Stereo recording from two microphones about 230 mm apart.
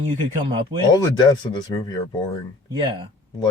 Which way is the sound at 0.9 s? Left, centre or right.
Centre.